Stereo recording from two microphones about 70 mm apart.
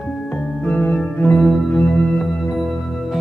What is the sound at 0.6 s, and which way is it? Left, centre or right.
Music, left.